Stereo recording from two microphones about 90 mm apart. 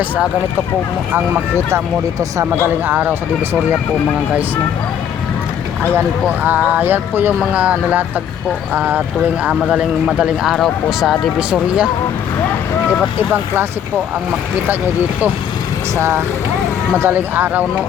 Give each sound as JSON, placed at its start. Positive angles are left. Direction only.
{"t": 2.6, "sound": "speech", "side_deg": -20}
{"t": 6.4, "sound": "a man's voice", "side_deg": -20}
{"t": 13.1, "sound": "speech", "side_deg": -25}
{"t": 16.0, "sound": "speech", "side_deg": -30}